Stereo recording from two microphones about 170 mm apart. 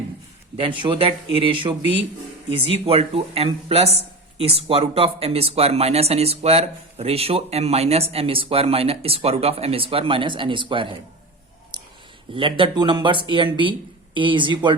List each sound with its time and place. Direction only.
0.5 s speech: 30° right (ahead or behind)
2.8 s speech: 35° right (ahead or behind)
11.7 s clicking: 25° right (ahead or behind)
12.3 s speech: 30° right (ahead or behind)